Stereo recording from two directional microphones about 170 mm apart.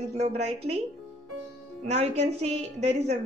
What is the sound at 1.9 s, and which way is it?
A woman's voice, 40° right (ahead or behind).